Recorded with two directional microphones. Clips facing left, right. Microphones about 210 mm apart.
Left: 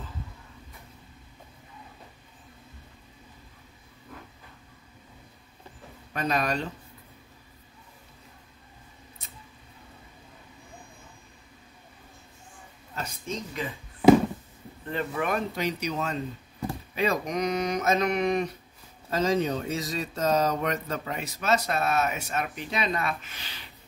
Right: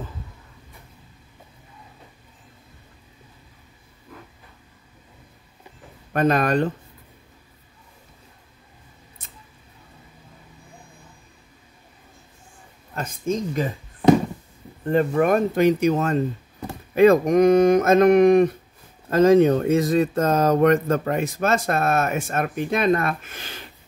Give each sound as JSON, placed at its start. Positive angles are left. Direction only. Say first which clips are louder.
{"t": 6.1, "sound": "speech", "louder": "right 8 dB", "side_deg": -55}
{"t": 12.9, "sound": "speech", "louder": "right 9 dB", "side_deg": -50}
{"t": 14.9, "sound": "speech", "louder": "right 10 dB", "side_deg": -45}